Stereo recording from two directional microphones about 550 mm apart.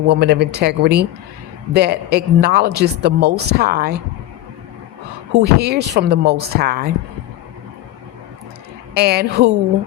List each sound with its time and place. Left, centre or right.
0.1 s a woman's voice: centre
5.3 s a woman's voice: centre
9.0 s a woman's voice: centre